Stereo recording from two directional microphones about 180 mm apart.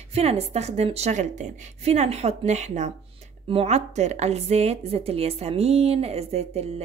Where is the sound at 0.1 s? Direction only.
35° right (ahead or behind).